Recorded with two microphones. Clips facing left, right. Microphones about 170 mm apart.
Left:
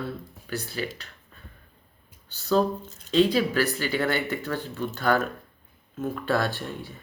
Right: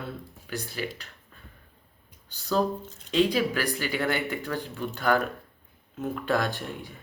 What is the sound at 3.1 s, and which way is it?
Speech, 15° right (ahead or behind).